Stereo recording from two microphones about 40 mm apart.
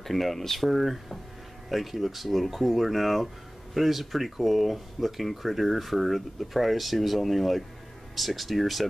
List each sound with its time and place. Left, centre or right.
0.0 s speech: centre